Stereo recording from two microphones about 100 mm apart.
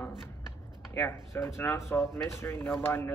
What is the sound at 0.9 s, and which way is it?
Speech, 20° left (ahead or behind).